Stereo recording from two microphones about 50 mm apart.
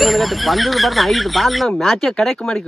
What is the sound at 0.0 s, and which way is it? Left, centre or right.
Speech, centre.